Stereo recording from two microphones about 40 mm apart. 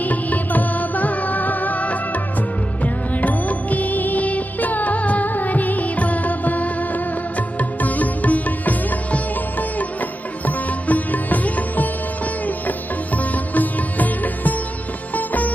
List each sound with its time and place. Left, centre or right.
0.0 s music: left
12.4 s sitar: left
15.1 s music: left